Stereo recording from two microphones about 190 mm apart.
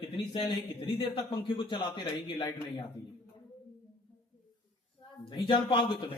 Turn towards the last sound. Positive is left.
turn(degrees=25)  # may be behind; listen again after turning